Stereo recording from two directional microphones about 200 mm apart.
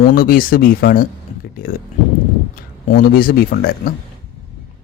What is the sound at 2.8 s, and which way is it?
Speech, 45° left (ahead or behind).